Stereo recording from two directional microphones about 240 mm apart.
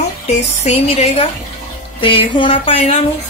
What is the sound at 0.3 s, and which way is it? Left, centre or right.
Speech, left.